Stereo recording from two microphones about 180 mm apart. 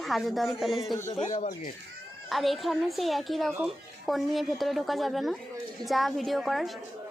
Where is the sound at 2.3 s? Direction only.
Centre (ahead or behind).